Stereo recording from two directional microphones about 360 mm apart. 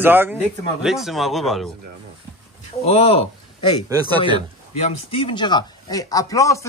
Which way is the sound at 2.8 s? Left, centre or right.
Centre.